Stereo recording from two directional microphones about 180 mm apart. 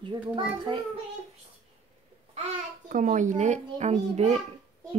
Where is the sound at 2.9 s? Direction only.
45° right (ahead or behind).